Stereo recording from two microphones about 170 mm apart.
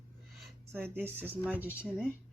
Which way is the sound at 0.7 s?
10° right (ahead or behind).